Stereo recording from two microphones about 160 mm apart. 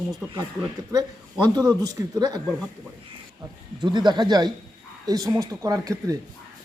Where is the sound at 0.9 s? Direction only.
20° right (ahead or behind).